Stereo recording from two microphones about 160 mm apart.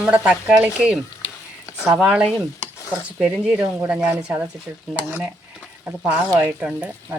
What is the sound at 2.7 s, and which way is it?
Stir, 20° left (ahead or behind).